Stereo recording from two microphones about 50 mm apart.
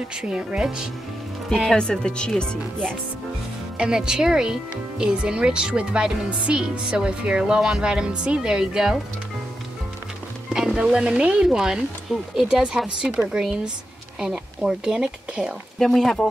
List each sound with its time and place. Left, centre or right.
0.2 s speech: centre
1.7 s speech: centre
3.7 s speech: centre
10.5 s speech: centre
15.8 s speech: centre